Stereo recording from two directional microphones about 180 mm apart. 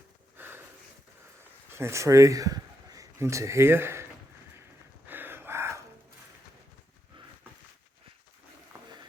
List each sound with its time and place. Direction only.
0.3 s a sound: 10° right (ahead or behind)
1.7 s speech: 15° right (ahead or behind)
5.0 s gasp: 10° right (ahead or behind)